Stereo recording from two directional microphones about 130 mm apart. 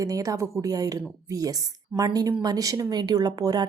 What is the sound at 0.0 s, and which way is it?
Speech, 25° right (ahead or behind).